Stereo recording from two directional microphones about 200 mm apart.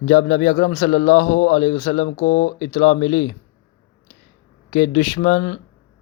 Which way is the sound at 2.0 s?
65° left (ahead or behind).